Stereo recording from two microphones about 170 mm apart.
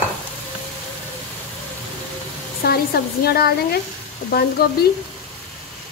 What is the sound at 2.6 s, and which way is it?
Speech, 65° left (ahead or behind).